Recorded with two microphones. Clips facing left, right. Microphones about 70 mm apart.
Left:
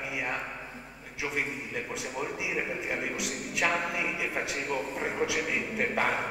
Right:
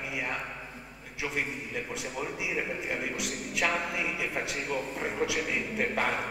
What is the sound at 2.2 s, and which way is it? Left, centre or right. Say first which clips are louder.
A man's voice: left 1 dB; centre.